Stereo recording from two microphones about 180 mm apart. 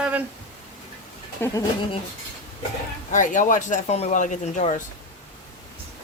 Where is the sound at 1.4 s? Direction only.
10° left (ahead or behind).